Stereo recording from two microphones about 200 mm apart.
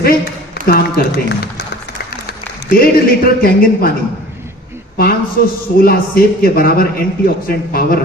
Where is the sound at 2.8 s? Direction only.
45° left (ahead or behind).